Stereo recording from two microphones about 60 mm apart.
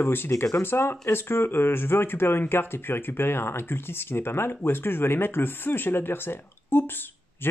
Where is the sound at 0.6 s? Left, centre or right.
Left.